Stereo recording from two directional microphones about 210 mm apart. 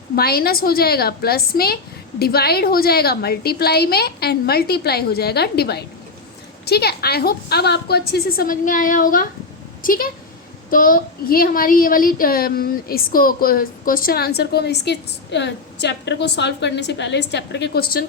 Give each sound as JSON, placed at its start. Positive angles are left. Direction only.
{"t": 0.2, "sound": "a woman's voice", "side_deg": 45}